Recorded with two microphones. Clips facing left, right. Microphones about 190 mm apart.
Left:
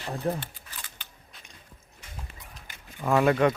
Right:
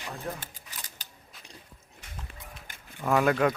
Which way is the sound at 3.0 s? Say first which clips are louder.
Left 2 dB; centre (ahead or behind).